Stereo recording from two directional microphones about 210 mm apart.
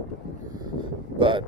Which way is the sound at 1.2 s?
25° right (ahead or behind).